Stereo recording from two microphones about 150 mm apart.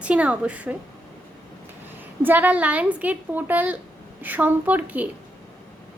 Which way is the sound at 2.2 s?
10° right (ahead or behind).